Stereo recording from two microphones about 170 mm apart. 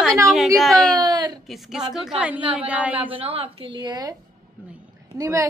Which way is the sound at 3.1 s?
35° right (ahead or behind).